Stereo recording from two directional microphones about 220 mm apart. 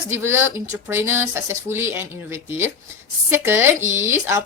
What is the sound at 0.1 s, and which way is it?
Speech, 10° right (ahead or behind).